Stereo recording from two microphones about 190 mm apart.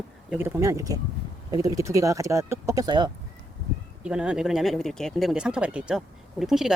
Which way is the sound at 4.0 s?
5° right (ahead or behind).